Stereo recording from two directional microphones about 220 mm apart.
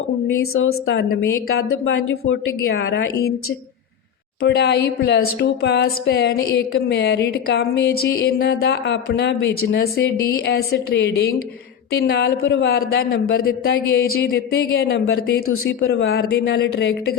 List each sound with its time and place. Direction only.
0.5 s a woman's voice: 70° left (ahead or behind)
1.5 s speech: 60° left (ahead or behind)
2.7 s speech: 50° left (ahead or behind)
4.4 s speech: 50° left (ahead or behind)